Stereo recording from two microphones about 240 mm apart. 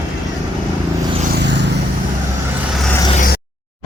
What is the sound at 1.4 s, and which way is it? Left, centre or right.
Vehicle, right.